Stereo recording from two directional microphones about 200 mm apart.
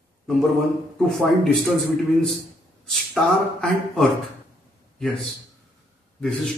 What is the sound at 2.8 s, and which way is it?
Speech, centre (ahead or behind).